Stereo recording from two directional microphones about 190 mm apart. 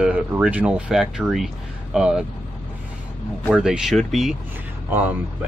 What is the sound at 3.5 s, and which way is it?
Speech, 5° right (ahead or behind).